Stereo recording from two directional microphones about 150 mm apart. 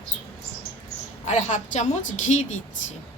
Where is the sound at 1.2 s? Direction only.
55° left (ahead or behind).